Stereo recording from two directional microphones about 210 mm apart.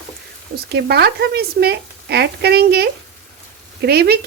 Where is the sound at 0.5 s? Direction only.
50° right (ahead or behind).